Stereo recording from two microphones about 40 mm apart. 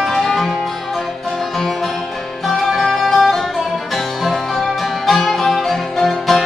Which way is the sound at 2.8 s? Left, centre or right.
Centre.